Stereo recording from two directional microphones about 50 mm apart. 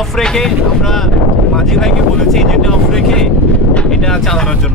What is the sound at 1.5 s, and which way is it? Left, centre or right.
Wind noise, centre.